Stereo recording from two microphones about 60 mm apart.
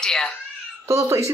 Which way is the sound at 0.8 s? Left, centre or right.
Right.